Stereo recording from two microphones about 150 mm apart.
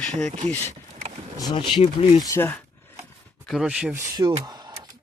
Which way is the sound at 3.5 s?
5° right (ahead or behind).